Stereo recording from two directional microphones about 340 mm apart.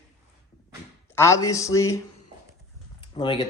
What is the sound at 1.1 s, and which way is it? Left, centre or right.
Speech, centre.